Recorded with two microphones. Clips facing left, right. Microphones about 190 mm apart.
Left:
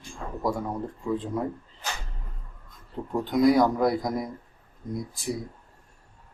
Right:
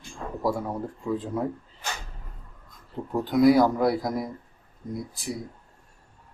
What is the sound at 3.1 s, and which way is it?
Speech, 5° right (ahead or behind).